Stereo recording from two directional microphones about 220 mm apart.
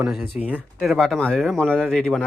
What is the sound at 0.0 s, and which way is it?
Speech, 5° right (ahead or behind).